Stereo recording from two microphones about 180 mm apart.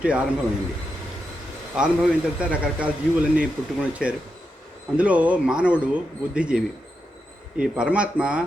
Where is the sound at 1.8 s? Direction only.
5° right (ahead or behind).